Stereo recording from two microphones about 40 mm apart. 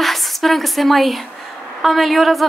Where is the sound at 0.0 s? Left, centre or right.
Centre.